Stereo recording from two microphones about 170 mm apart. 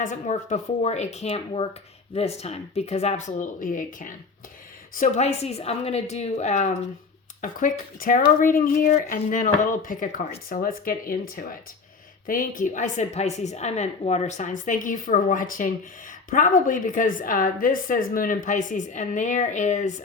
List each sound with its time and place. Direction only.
0.0 s speech: 45° left (ahead or behind)
4.9 s speech: 40° left (ahead or behind)